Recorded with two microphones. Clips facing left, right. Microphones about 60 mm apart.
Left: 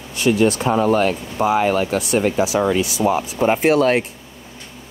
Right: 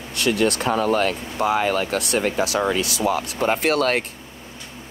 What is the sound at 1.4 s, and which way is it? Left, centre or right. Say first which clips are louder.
Speech: left 3 dB; left.